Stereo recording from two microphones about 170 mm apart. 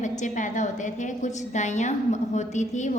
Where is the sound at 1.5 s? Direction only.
45° left (ahead or behind).